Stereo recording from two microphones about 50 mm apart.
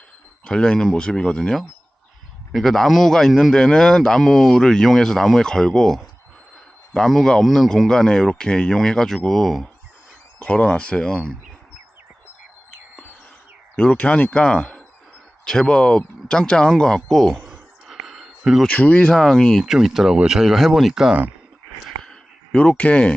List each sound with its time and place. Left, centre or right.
0.4 s a man's voice: centre
10.4 s speech: left
13.7 s a man's voice: left; by 17.4 s centre
17.8 s a sound: centre
18.7 s speech: left
19.1 s a man's voice: centre
19.6 s speech: centre
22.8 s speech: left